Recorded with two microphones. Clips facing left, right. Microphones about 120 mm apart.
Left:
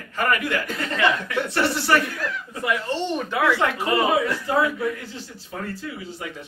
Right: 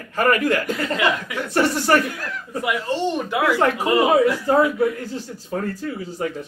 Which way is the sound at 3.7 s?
10° right (ahead or behind).